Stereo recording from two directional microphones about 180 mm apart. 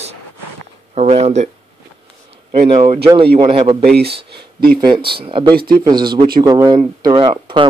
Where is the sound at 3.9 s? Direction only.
65° right (ahead or behind).